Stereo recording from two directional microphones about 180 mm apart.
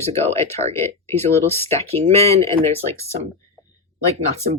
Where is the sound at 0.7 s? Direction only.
15° left (ahead or behind).